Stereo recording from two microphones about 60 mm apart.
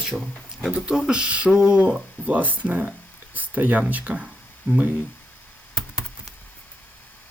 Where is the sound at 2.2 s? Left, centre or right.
Right.